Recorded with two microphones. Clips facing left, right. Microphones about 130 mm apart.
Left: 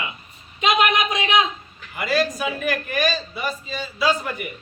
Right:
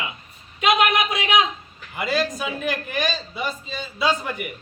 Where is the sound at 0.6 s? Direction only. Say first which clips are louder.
Even; 5° right (ahead or behind).